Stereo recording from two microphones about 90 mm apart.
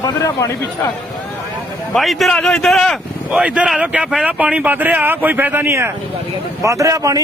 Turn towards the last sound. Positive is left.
turn(degrees=-40)  # may be behind; listen again after turning